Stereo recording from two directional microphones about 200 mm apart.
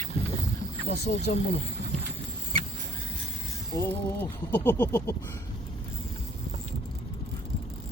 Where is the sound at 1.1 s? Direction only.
45° left (ahead or behind).